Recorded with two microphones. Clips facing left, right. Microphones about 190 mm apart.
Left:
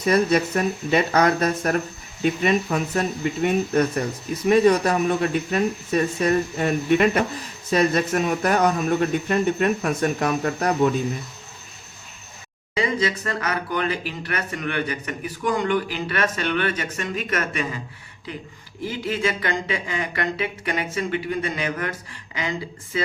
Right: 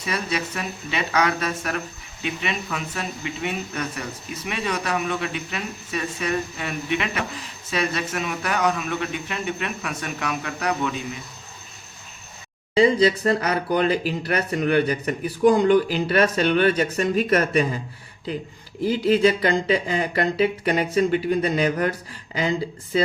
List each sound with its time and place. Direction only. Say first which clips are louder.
0.0 s speech: left 8 dB; 45° left (ahead or behind)
12.7 s speech: right 6 dB; 35° right (ahead or behind)
18.9 s speech: right 7 dB; 35° right (ahead or behind)